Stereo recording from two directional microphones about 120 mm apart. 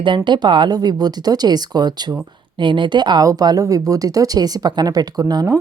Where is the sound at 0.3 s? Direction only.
40° right (ahead or behind).